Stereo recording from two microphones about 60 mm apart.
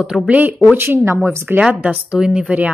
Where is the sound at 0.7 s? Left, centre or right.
Right.